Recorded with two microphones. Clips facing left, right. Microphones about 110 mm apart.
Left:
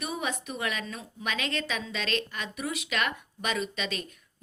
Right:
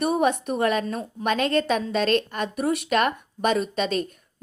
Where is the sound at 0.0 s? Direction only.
55° right (ahead or behind).